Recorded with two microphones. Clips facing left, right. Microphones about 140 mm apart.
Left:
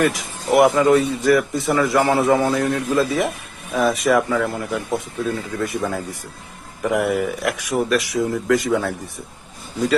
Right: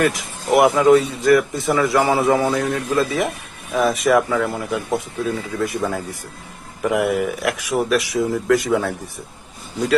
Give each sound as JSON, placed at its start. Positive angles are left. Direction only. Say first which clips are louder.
{"t": 0.0, "sound": "speech", "louder": "even", "side_deg": 0}